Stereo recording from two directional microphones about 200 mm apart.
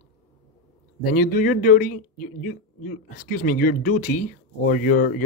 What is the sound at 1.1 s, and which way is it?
A man's voice, 45° left (ahead or behind).